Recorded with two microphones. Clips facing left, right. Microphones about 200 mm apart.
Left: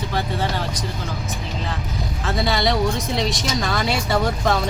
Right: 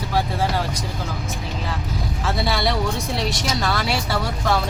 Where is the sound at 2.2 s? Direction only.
5° right (ahead or behind).